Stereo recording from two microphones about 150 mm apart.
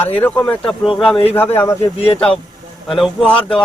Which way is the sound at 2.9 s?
Centre (ahead or behind).